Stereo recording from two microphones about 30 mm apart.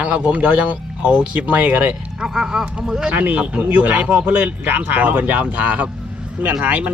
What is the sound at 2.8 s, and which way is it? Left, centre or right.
Speech, right.